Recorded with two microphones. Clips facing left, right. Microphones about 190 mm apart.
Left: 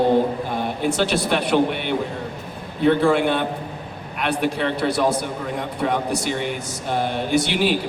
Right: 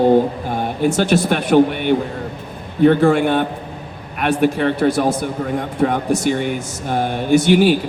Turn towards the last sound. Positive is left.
turn(degrees=-50)  # may be behind; listen again after turning